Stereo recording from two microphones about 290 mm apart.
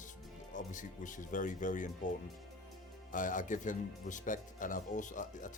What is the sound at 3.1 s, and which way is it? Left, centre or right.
Speech, left.